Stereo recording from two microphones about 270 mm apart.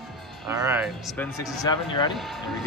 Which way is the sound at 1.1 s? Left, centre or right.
Centre.